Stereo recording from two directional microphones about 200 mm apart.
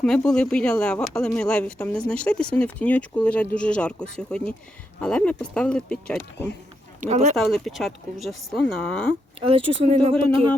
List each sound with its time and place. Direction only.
0.0 s speech: 5° left (ahead or behind)
7.0 s speech: 35° right (ahead or behind)
7.3 s speech: centre (ahead or behind)
9.4 s speech: 30° right (ahead or behind)